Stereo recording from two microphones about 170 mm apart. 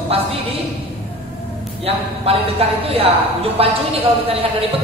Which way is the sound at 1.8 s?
35° right (ahead or behind).